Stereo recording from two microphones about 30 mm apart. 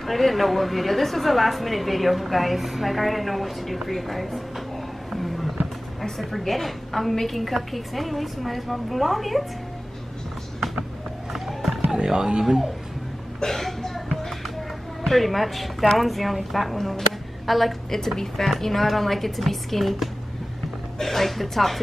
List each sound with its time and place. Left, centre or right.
0.0 s a woman's voice: centre
5.1 s a sound: centre
6.3 s a woman's voice: centre
11.3 s run: centre
11.9 s speech: right
13.6 s music: centre
15.0 s a woman's voice: centre
17.8 s a woman's voice: centre